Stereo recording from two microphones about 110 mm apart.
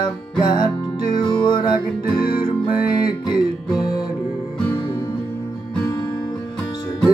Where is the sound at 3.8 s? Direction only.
35° left (ahead or behind).